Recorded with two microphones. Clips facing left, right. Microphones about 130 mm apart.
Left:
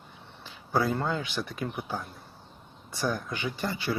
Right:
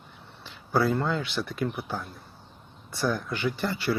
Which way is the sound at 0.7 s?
15° left (ahead or behind).